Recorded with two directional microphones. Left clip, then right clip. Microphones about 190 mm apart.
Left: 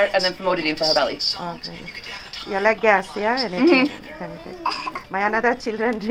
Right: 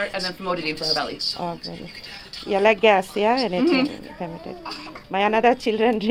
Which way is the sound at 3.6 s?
25° right (ahead or behind).